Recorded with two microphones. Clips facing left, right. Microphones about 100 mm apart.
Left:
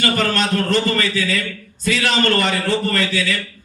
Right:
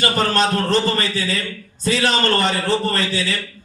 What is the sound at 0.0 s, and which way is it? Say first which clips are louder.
A man's voice: right 1 dB; 25° right (ahead or behind).